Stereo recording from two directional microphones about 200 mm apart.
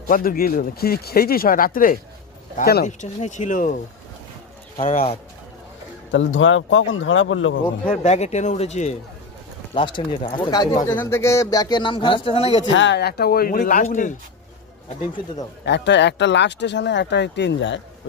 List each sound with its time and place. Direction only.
0.1 s speech: 45° left (ahead or behind)
4.8 s speech: 35° left (ahead or behind)
6.1 s speech: 75° left (ahead or behind)
7.9 s speech: 35° left (ahead or behind)
9.7 s speech: 25° left (ahead or behind)
12.7 s speech: 60° left (ahead or behind); by 14.1 s 40° left (ahead or behind)
15.6 s speech: 60° left (ahead or behind)